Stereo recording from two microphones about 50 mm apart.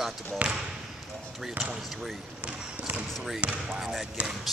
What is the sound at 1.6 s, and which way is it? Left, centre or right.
Speech, centre.